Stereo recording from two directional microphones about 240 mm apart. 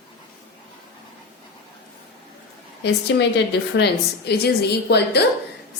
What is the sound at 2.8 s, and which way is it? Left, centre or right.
A woman's voice, left.